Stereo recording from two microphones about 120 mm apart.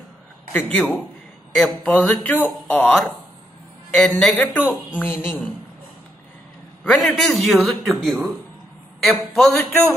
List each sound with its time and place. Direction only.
0.5 s a man's voice: 15° left (ahead or behind)
0.7 s a man's voice: centre (ahead or behind)
4.9 s speech: 15° left (ahead or behind)
6.8 s a man's voice: 5° left (ahead or behind)